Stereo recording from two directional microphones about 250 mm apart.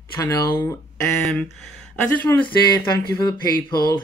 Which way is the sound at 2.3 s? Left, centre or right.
Centre.